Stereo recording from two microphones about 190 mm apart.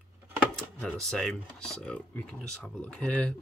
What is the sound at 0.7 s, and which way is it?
Speech, centre (ahead or behind).